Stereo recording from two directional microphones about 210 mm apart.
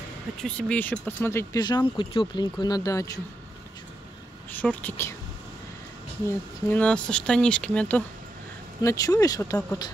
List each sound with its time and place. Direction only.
0.4 s speech: 5° left (ahead or behind)
4.5 s a woman's voice: 10° left (ahead or behind)
6.2 s speech: 5° left (ahead or behind)
8.8 s speech: 15° left (ahead or behind)